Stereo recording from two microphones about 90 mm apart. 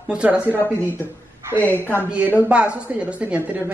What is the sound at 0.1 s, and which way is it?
Speech, 15° right (ahead or behind).